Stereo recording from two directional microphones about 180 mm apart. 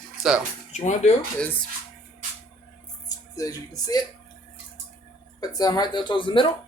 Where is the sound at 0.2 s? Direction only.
5° right (ahead or behind).